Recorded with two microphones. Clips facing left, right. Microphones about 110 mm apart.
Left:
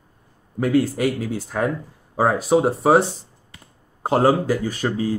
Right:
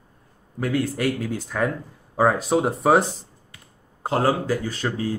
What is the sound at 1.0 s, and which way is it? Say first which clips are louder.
A man's voice: left 2 dB; 5° left (ahead or behind).